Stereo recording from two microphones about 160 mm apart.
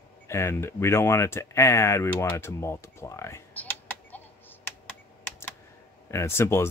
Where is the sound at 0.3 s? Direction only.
15° left (ahead or behind).